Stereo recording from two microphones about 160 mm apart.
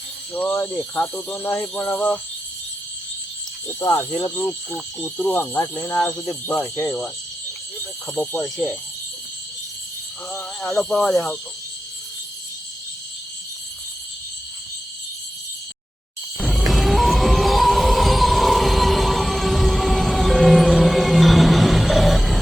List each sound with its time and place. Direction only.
0.3 s speech: 10° left (ahead or behind)
3.8 s speech: 20° left (ahead or behind)
5.0 s speech: 5° left (ahead or behind)
10.3 s speech: 15° left (ahead or behind)
10.8 s speech: 5° left (ahead or behind)
16.4 s music: centre (ahead or behind)